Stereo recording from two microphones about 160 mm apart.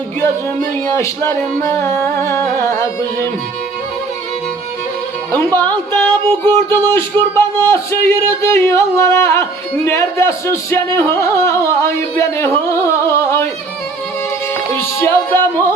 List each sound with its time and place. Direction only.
0.2 s music: 15° left (ahead or behind)
5.3 s music: 15° left (ahead or behind)
14.9 s music: 15° left (ahead or behind)